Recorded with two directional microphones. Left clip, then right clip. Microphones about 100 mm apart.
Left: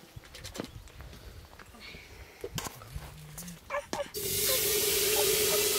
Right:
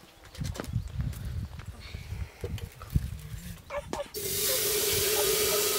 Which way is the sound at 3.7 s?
40° left (ahead or behind).